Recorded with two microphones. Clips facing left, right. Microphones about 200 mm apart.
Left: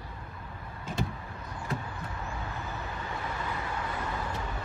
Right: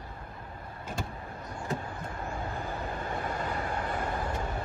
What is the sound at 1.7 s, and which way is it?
Vehicle, 50° right (ahead or behind).